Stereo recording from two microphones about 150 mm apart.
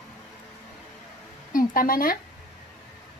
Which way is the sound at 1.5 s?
70° left (ahead or behind).